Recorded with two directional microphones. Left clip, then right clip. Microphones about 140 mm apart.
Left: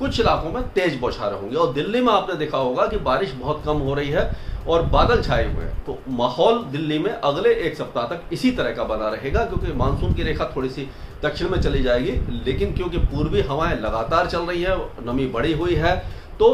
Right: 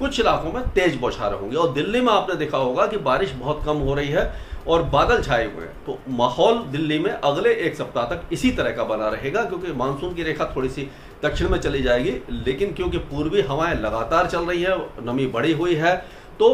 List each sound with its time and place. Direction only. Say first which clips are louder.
0.0 s a man's voice: even; 20° right (ahead or behind)